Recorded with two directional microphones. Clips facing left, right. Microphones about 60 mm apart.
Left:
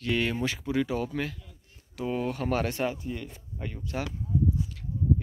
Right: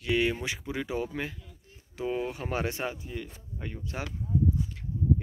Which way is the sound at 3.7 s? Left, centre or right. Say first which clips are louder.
Left 3 dB; centre.